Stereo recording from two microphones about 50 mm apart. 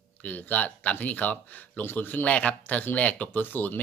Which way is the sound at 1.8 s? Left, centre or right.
Left.